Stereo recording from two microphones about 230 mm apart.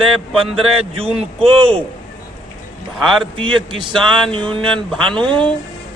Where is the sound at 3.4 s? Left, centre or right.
Right.